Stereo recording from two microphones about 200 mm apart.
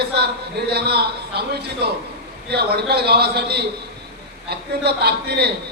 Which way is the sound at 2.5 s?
55° right (ahead or behind).